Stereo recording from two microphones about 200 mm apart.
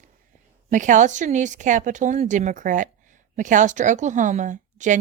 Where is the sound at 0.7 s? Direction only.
40° right (ahead or behind).